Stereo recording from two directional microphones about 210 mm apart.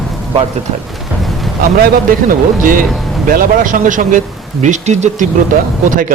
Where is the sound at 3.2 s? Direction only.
40° right (ahead or behind).